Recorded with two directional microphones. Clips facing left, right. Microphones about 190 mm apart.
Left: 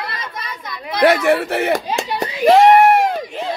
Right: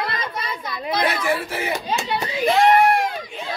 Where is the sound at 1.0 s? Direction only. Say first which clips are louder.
Left 10 dB; 70° left (ahead or behind).